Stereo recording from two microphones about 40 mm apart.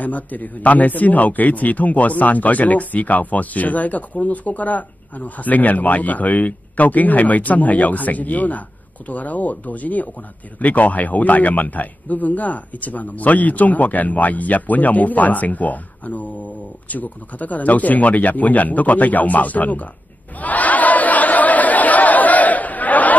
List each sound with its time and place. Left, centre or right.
0.0 s a man's voice: left
20.3 s chatter: left